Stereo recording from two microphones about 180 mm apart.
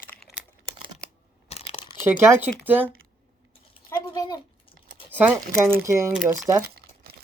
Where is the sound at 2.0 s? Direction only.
15° right (ahead or behind).